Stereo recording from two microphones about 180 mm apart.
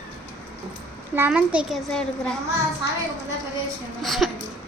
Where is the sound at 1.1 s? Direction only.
10° right (ahead or behind).